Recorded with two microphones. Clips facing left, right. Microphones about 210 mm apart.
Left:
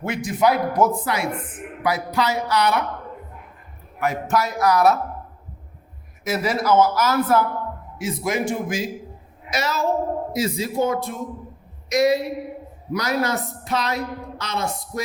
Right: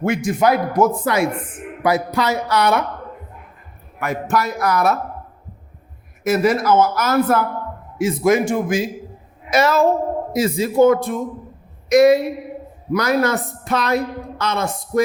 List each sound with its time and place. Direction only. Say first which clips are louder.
0.0 s a woman's voice: right 3 dB; 50° right (ahead or behind)
4.0 s a woman's voice: right 1 dB; 55° right (ahead or behind)
6.2 s a woman's voice: right 5 dB; 55° right (ahead or behind)